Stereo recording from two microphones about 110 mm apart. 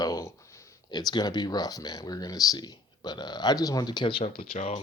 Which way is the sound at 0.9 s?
40° left (ahead or behind).